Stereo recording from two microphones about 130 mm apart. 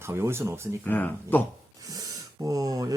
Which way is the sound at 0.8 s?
15° left (ahead or behind).